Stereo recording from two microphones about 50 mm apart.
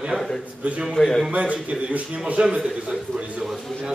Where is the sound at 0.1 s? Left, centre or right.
Right.